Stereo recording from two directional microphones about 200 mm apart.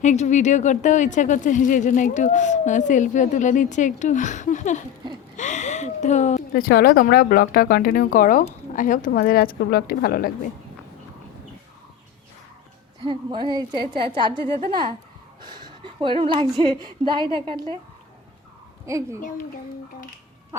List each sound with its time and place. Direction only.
0.0 s speech: 35° left (ahead or behind)
13.1 s a woman's voice: 20° right (ahead or behind)
15.4 s a sound: 20° right (ahead or behind)
17.0 s a woman's voice: 25° right (ahead or behind)
18.9 s a child's voice: 15° right (ahead or behind)
20.5 s a sound: 15° right (ahead or behind)